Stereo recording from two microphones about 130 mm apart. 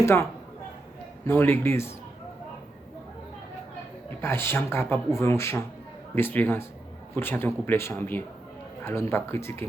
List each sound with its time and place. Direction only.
0.0 s speech: 20° left (ahead or behind)
1.3 s speech: 15° left (ahead or behind)
4.2 s speech: 20° left (ahead or behind)